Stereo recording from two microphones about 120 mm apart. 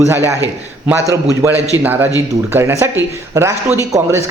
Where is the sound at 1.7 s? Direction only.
15° right (ahead or behind).